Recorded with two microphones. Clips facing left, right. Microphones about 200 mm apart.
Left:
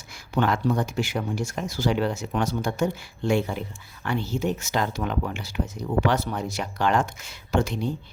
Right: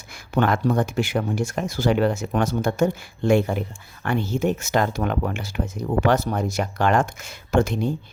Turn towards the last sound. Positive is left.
turn(degrees=-50)  # may be behind; listen again after turning